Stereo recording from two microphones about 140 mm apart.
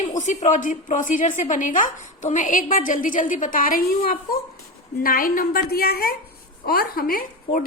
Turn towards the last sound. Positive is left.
turn(degrees=90)